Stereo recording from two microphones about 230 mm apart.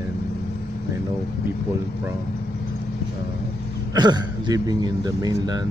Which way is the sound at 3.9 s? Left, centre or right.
Centre.